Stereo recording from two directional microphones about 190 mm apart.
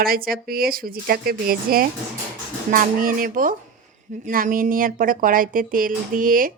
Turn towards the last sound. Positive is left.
turn(degrees=-45)  # may be behind; listen again after turning